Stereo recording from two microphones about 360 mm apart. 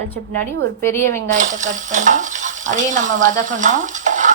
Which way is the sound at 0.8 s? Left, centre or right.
Centre.